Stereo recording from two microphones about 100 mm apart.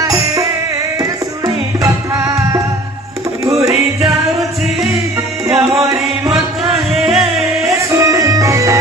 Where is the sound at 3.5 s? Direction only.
30° right (ahead or behind).